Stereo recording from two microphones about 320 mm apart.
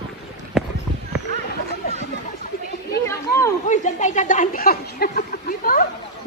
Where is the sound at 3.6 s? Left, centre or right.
Left.